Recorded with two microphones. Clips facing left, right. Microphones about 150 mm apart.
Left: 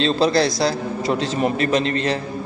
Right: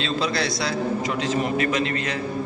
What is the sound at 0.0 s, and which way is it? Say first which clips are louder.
A man's voice: left 7 dB; 35° left (ahead or behind).